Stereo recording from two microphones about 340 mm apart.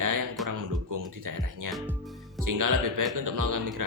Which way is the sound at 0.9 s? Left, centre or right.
Right.